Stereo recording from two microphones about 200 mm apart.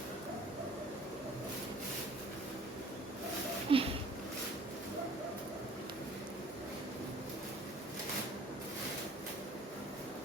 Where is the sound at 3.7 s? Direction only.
25° right (ahead or behind).